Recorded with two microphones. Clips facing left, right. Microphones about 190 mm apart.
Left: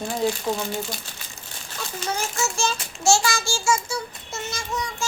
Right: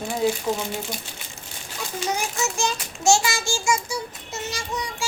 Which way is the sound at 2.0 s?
15° right (ahead or behind).